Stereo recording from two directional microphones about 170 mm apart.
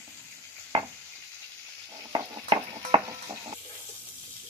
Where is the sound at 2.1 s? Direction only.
25° right (ahead or behind).